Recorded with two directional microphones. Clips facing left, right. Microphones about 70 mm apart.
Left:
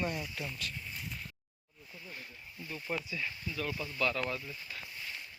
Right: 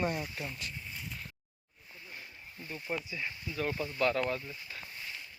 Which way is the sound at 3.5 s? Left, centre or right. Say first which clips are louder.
Right 5 dB; right.